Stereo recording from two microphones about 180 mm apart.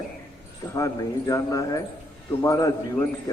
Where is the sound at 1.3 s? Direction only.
20° left (ahead or behind).